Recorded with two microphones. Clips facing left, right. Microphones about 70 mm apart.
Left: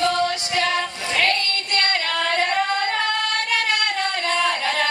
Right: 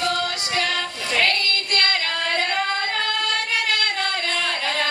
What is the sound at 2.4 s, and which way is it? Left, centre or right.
Singing, centre.